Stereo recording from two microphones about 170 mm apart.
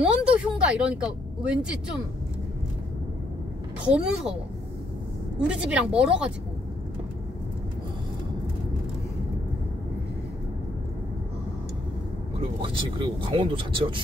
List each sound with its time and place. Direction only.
0.0 s vehicle: 5° right (ahead or behind)
3.9 s speech: 5° right (ahead or behind)
5.5 s a woman's voice: 5° right (ahead or behind)
12.6 s speech: 30° right (ahead or behind)